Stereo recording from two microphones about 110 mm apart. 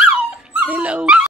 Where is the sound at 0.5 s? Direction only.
10° right (ahead or behind).